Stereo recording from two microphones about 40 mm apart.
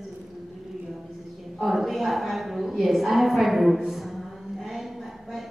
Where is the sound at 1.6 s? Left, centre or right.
Centre.